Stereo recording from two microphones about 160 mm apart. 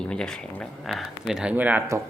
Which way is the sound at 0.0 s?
5° left (ahead or behind).